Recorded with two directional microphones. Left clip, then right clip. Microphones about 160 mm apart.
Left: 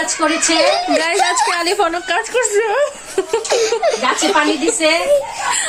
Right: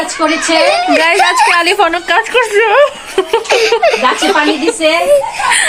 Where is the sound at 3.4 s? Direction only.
25° left (ahead or behind).